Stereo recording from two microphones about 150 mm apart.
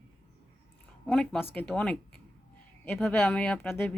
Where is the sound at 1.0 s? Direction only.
5° left (ahead or behind).